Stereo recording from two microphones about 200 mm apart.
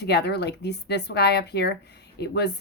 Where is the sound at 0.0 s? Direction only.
55° left (ahead or behind).